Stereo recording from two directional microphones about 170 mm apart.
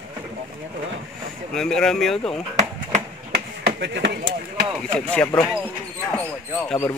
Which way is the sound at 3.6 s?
90° right.